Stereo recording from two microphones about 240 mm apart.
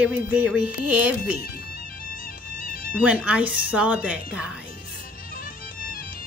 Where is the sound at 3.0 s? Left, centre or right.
Centre.